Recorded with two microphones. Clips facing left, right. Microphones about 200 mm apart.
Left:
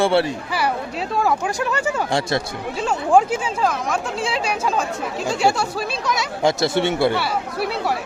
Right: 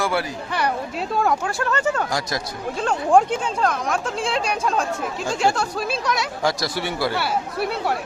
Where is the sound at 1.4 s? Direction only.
15° left (ahead or behind).